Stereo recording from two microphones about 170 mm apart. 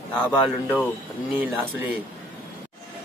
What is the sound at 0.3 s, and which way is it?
Speech, 10° left (ahead or behind).